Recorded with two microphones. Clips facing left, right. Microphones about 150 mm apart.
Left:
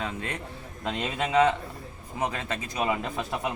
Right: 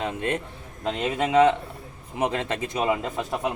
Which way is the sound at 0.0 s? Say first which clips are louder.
Right 6 dB; 20° right (ahead or behind).